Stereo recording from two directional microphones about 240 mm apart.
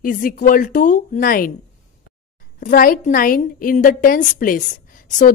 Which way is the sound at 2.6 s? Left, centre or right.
Left.